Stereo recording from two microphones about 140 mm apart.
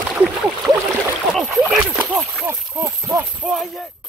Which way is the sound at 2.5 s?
20° right (ahead or behind).